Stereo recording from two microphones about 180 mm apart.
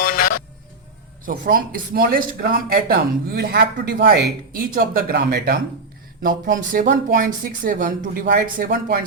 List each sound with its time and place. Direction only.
0.0 s music: 50° left (ahead or behind)
1.2 s speech: 50° right (ahead or behind)
6.2 s speech: 50° right (ahead or behind)